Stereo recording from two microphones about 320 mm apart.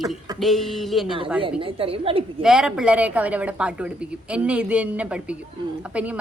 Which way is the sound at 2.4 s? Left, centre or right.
Centre.